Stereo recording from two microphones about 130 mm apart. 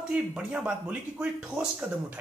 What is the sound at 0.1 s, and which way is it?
Speech, 5° right (ahead or behind).